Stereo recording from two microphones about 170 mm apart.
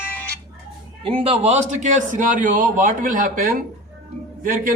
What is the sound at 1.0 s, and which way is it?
A man's voice, 35° right (ahead or behind).